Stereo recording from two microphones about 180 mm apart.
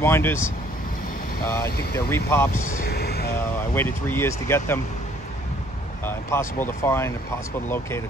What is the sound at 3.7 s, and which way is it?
Speech, 10° left (ahead or behind).